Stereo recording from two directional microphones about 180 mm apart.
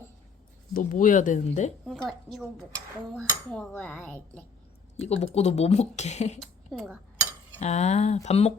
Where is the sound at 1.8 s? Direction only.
5° left (ahead or behind).